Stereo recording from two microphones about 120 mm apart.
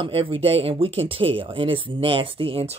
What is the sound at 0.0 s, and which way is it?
Speech, 45° right (ahead or behind).